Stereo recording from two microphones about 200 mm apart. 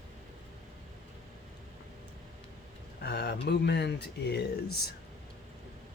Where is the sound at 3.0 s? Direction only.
55° left (ahead or behind).